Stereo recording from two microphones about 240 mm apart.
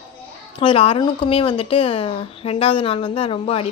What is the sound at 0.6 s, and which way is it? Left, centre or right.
A woman's voice, left.